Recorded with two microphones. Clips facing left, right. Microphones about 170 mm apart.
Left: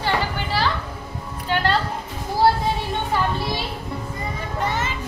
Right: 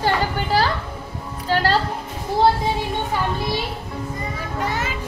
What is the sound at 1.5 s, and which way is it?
Music, 35° right (ahead or behind).